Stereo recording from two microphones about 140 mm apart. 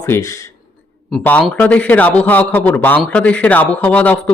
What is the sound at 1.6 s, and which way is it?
Speech, 10° left (ahead or behind).